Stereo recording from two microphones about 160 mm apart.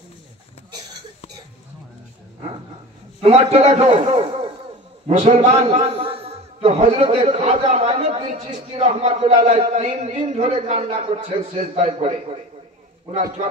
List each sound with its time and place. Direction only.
3.2 s a man's voice: 40° right (ahead or behind)